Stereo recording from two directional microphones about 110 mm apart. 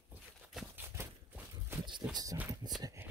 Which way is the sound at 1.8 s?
40° right (ahead or behind).